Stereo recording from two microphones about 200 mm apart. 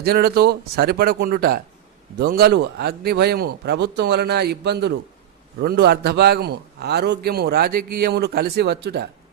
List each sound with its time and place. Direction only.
0.0 s a man's voice: 50° right (ahead or behind)